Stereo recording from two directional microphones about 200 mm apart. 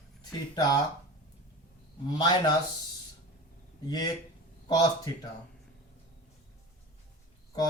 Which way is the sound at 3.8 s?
20° left (ahead or behind).